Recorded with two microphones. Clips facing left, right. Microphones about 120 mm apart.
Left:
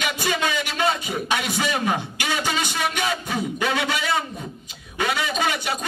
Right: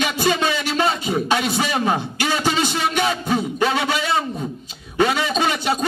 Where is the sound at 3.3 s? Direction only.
25° right (ahead or behind).